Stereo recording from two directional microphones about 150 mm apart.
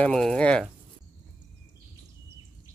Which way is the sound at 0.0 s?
5° left (ahead or behind).